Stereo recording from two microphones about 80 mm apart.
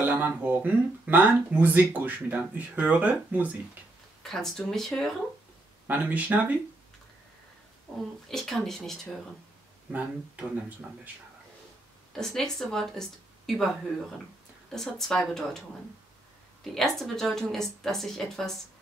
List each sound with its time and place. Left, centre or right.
0.1 s speech: right
4.2 s a woman's voice: centre
5.9 s speech: centre
8.3 s a woman's voice: centre
9.8 s speech: centre
12.1 s speech: centre
14.7 s a woman's voice: centre
16.7 s a woman's voice: centre